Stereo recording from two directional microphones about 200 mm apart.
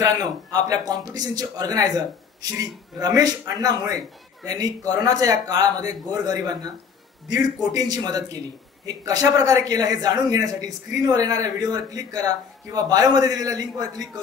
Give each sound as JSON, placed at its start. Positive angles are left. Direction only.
{"t": 0.0, "sound": "speech", "side_deg": -20}